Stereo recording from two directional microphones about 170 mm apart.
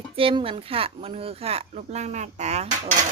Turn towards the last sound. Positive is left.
turn(degrees=-40)  # may be behind; listen again after turning